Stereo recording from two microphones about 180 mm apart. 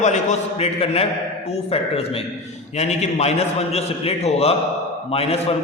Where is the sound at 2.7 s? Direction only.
35° left (ahead or behind).